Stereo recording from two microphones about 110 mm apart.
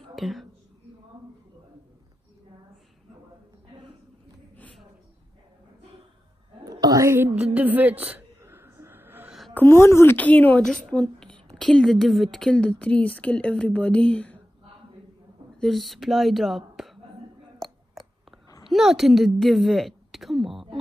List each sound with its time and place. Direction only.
0.1 s a woman's voice: centre (ahead or behind)
6.6 s a sound: 35° right (ahead or behind)
7.5 s speech: 15° right (ahead or behind)
8.4 s a sound: 25° right (ahead or behind)
9.5 s a woman's voice: 20° left (ahead or behind)
15.6 s speech: centre (ahead or behind)
18.7 s a woman's voice: centre (ahead or behind)